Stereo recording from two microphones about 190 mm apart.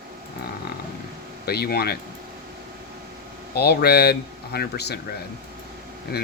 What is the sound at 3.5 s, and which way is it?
Speech, 60° left (ahead or behind).